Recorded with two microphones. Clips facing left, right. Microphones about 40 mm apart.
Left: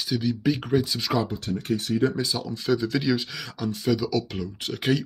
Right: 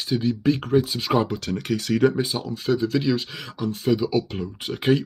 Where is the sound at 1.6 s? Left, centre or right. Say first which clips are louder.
Right 2 dB; right.